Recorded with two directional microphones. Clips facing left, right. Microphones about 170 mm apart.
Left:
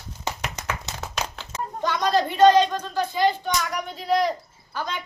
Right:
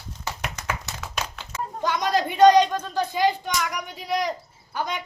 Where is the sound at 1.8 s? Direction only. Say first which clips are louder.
Left 1 dB; 15° right (ahead or behind).